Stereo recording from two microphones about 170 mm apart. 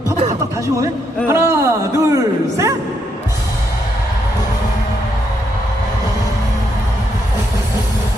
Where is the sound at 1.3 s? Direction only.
15° right (ahead or behind).